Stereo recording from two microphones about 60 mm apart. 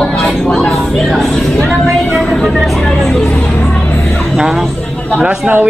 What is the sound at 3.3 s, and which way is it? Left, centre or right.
Speech, left.